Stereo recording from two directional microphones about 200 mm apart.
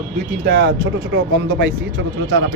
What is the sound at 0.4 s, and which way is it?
Speech, 50° right (ahead or behind).